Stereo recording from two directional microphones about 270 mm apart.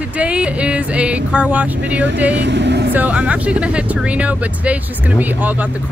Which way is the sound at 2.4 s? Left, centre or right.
Right.